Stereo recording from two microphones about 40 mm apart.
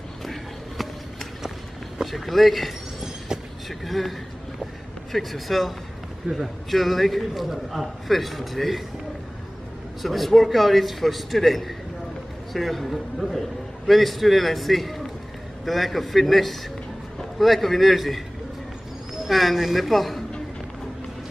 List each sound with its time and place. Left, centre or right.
2.0 s a man's voice: centre
3.8 s a man's voice: centre
5.1 s a man's voice: centre
6.2 s a man's voice: right
6.7 s a man's voice: centre
10.0 s a man's voice: centre
19.2 s a man's voice: centre